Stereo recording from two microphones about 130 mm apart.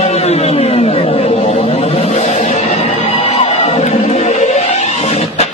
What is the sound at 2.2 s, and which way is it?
Music, 70° left (ahead or behind).